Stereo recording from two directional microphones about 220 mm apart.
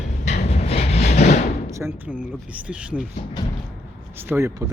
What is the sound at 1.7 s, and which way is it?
Speech, 10° right (ahead or behind).